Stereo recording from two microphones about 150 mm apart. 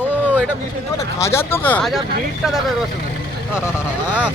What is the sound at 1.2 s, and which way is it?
Speech, 15° left (ahead or behind).